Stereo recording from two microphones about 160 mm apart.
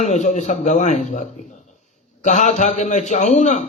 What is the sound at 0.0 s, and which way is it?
A man's voice, 45° left (ahead or behind).